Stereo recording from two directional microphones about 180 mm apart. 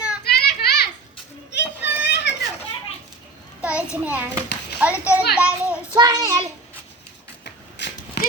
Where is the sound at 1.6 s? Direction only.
70° left (ahead or behind).